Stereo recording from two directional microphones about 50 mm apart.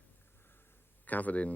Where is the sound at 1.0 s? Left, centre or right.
Left.